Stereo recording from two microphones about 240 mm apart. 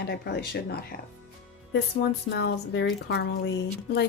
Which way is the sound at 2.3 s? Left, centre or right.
Left.